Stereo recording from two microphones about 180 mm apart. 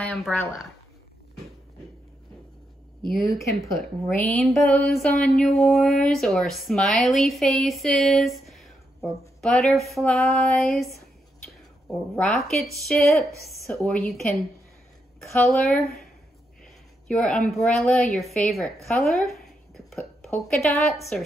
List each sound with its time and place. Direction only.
0.1 s a woman's voice: 5° left (ahead or behind)
3.3 s a woman's voice: 15° left (ahead or behind); by 10.9 s centre (ahead or behind)
12.2 s a woman's voice: 5° left (ahead or behind)
15.4 s a woman's voice: centre (ahead or behind)
17.1 s a woman's voice: 5° left (ahead or behind)
18.9 s a sound: centre (ahead or behind)
20.3 s a woman's voice: 5° left (ahead or behind)